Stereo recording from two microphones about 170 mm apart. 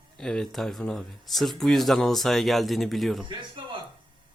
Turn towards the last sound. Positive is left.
turn(degrees=-30)  # may be behind; listen again after turning